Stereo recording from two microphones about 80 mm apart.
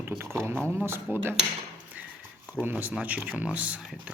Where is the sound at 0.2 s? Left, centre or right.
Right.